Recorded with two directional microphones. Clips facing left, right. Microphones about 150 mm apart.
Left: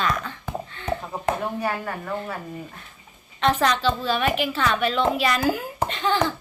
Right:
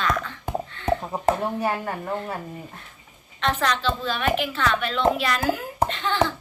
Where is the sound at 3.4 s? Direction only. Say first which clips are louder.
Left 3 dB; 10° left (ahead or behind).